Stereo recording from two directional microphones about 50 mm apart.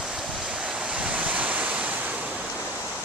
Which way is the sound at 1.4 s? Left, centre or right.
Right.